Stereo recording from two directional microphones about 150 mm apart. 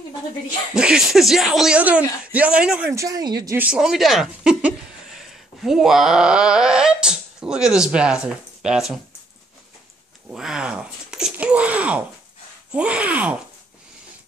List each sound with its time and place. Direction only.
0.7 s speech: 5° right (ahead or behind)
2.9 s speech: 20° right (ahead or behind)
3.5 s speech: 10° right (ahead or behind)
10.3 s speech: 5° right (ahead or behind)